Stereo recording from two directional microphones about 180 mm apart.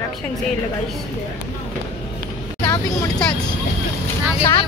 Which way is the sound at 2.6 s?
25° left (ahead or behind).